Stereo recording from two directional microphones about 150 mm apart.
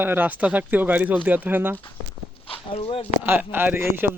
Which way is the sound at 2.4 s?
40° left (ahead or behind).